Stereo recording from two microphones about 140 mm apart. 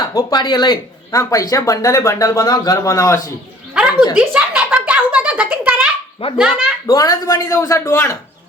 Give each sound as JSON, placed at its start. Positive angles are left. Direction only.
{"t": 0.0, "sound": "speech", "side_deg": 25}
{"t": 4.1, "sound": "a sound", "side_deg": -5}
{"t": 6.2, "sound": "speech", "side_deg": 45}
{"t": 6.8, "sound": "speech", "side_deg": 25}